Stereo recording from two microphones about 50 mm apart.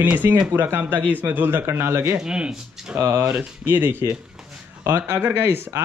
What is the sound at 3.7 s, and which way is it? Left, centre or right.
Speech, right.